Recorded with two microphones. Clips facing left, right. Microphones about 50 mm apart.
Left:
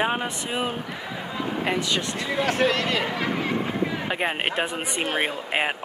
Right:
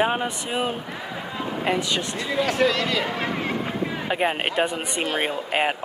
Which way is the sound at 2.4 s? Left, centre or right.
Left.